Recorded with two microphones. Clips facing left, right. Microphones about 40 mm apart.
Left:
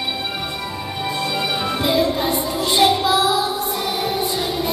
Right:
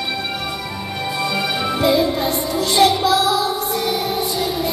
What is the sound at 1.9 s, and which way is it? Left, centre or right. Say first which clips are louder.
Music: even; centre.